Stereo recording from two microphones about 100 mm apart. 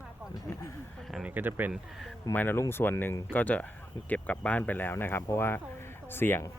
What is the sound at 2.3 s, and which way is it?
Speech, 20° left (ahead or behind).